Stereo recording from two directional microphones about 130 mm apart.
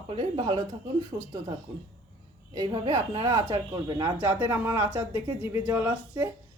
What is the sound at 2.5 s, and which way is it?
Speech, 35° right (ahead or behind).